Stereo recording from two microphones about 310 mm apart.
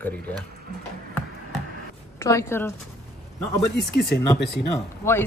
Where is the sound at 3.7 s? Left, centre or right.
Left.